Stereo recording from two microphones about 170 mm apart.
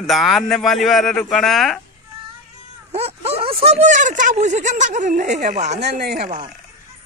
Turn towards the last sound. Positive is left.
turn(degrees=-40)  # may be behind; listen again after turning